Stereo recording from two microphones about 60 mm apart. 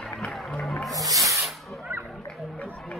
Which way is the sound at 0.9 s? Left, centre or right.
Right.